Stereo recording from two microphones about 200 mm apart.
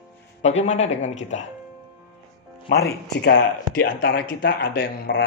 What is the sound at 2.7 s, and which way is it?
Speech, 55° left (ahead or behind).